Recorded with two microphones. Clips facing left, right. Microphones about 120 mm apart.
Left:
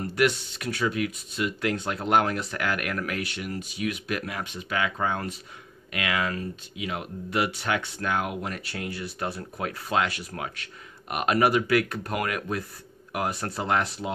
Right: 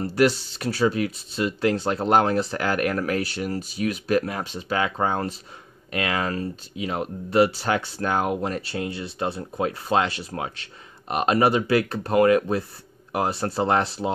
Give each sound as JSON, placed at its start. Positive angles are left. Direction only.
{"t": 0.0, "sound": "speech", "side_deg": -35}